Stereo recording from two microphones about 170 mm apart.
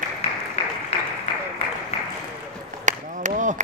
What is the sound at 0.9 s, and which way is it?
Applause, 35° left (ahead or behind).